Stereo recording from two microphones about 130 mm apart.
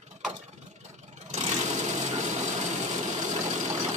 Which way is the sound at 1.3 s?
60° right (ahead or behind).